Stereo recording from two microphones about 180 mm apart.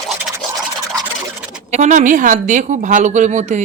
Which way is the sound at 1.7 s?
40° right (ahead or behind).